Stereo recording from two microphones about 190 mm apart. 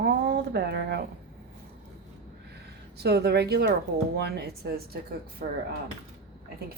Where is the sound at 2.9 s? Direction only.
60° right (ahead or behind).